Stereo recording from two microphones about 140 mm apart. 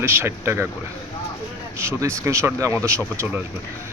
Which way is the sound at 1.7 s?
20° right (ahead or behind).